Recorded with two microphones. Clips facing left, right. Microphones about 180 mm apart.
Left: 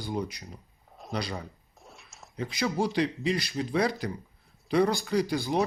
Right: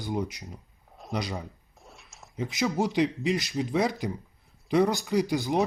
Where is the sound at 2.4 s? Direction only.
20° right (ahead or behind).